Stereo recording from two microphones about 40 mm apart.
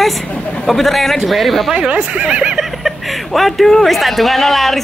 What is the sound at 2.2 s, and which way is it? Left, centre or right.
Speech, right.